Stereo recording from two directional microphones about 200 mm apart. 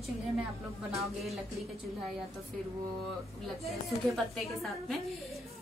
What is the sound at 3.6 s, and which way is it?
A woman's voice, centre (ahead or behind).